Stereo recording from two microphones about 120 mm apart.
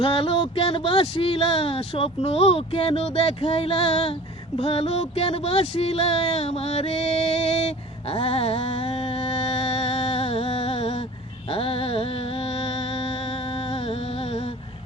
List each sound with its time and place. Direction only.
0.0 s speech: 50° left (ahead or behind)
4.5 s a sound: 55° left (ahead or behind)
11.5 s speech: 50° left (ahead or behind)